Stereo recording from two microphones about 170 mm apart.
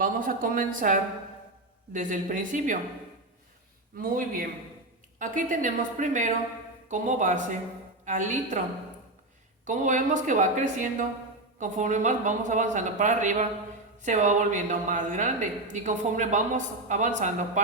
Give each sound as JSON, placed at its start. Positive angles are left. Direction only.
{"t": 0.0, "sound": "speech", "side_deg": -55}
{"t": 3.9, "sound": "a man's voice", "side_deg": -55}
{"t": 9.6, "sound": "speech", "side_deg": -50}